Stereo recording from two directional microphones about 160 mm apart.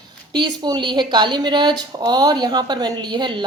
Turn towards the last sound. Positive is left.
turn(degrees=-25)  # may be behind; listen again after turning